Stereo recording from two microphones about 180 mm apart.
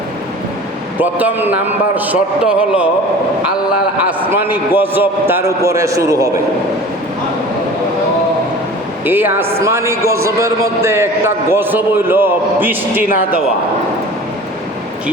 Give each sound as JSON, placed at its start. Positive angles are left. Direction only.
{"t": 0.9, "sound": "a man's voice", "side_deg": -10}
{"t": 3.9, "sound": "a man's voice", "side_deg": -10}
{"t": 9.0, "sound": "a man's voice", "side_deg": -10}